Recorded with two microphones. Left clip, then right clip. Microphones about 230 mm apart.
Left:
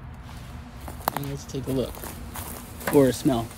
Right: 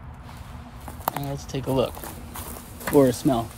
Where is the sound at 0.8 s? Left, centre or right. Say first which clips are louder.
Even; centre.